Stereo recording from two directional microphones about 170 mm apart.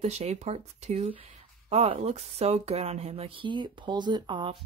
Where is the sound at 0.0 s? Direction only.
40° right (ahead or behind).